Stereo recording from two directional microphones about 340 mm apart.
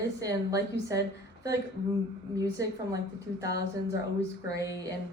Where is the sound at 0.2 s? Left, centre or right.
Centre.